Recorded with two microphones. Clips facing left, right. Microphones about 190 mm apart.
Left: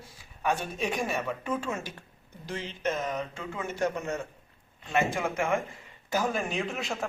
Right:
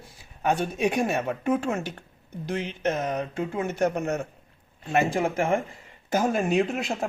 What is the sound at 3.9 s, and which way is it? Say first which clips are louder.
Speech: right 5 dB; 60° right (ahead or behind).